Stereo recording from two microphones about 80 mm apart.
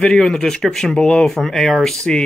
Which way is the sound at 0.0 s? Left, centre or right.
Centre.